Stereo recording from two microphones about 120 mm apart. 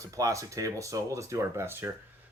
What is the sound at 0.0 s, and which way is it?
Speech, 30° right (ahead or behind).